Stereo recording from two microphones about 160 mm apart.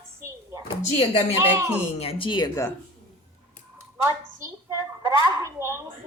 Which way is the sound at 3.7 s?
15° right (ahead or behind).